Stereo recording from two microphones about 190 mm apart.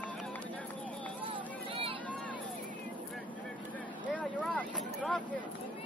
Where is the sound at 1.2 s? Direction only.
25° right (ahead or behind).